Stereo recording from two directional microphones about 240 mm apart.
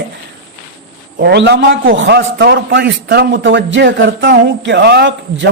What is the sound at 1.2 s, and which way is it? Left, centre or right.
A man's voice, right.